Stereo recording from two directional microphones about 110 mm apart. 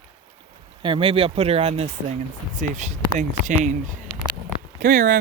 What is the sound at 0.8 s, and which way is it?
Speech, 50° right (ahead or behind).